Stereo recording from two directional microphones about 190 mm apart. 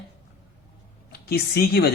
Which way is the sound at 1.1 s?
55° left (ahead or behind).